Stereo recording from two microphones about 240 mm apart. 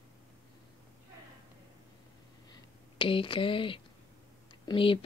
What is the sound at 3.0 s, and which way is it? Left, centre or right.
Speech, left.